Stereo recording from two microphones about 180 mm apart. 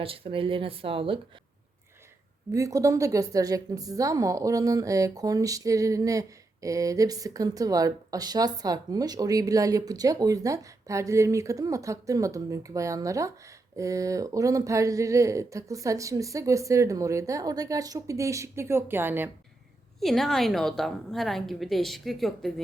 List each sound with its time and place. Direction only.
0.0 s a woman's voice: 30° right (ahead or behind)
2.5 s a woman's voice: 20° right (ahead or behind)
20.0 s a woman's voice: centre (ahead or behind)